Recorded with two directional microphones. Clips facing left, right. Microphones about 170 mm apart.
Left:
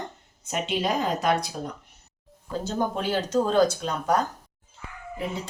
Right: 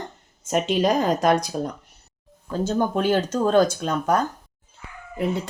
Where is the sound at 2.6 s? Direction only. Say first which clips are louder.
Right 6 dB; 50° right (ahead or behind).